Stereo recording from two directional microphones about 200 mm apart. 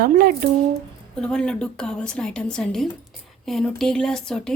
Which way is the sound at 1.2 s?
5° left (ahead or behind).